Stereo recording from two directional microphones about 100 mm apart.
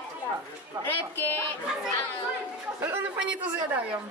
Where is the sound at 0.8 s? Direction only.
20° left (ahead or behind).